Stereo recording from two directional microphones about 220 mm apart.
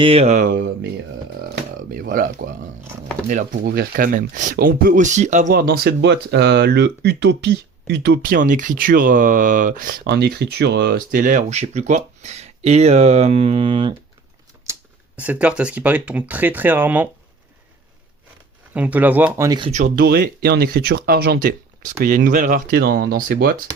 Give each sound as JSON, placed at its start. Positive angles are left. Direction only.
{"t": 0.0, "sound": "speech", "side_deg": -25}
{"t": 1.9, "sound": "speech", "side_deg": -40}
{"t": 14.7, "sound": "speech", "side_deg": -5}
{"t": 18.7, "sound": "speech", "side_deg": -5}
{"t": 19.7, "sound": "speech", "side_deg": -40}